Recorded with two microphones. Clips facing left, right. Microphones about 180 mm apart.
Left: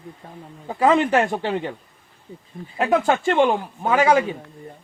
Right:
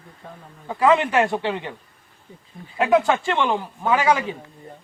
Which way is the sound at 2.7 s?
45° left (ahead or behind).